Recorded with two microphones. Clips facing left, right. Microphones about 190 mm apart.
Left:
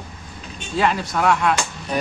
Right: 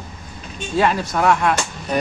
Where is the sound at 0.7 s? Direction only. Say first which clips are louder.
Right 2 dB; 45° right (ahead or behind).